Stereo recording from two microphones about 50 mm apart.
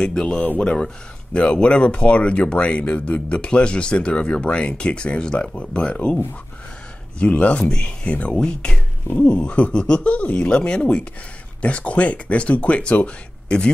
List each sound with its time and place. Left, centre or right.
0.0 s speech: centre
7.2 s speech: left
9.0 s speech: left
9.3 s speech: left